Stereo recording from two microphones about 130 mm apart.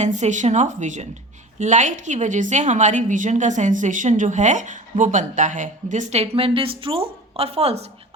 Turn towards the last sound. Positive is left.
turn(degrees=-55)  # may be behind; listen again after turning